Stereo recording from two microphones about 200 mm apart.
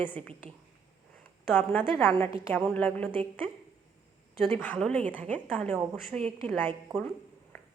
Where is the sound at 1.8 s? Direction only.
5° left (ahead or behind).